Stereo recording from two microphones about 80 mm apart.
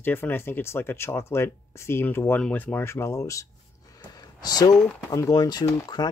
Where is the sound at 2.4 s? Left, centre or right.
Centre.